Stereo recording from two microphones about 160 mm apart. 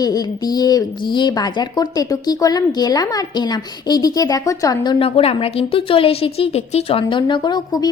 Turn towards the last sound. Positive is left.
turn(degrees=25)  # may be behind; listen again after turning